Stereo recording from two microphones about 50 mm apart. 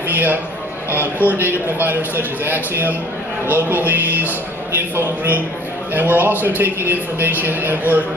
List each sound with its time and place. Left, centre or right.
0.1 s a man's voice: right
1.2 s music: right
1.8 s a woman's voice: right
3.5 s music: right
4.9 s a woman's voice: right
5.9 s music: right
6.6 s a woman's voice: right